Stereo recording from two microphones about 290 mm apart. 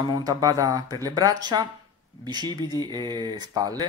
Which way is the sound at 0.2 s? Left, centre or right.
Centre.